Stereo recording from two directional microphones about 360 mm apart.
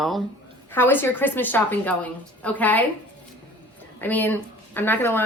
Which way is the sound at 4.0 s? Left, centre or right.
Centre.